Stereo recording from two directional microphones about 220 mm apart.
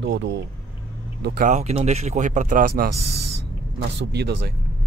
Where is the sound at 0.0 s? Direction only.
55° right (ahead or behind).